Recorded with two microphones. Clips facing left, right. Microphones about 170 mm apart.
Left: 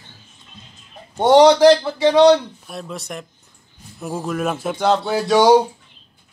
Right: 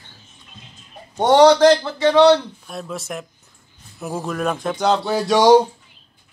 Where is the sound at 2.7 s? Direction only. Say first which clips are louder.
Right 1 dB; centre (ahead or behind).